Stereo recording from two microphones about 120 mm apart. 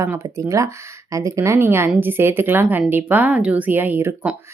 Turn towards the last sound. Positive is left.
turn(degrees=-15)  # may be behind; listen again after turning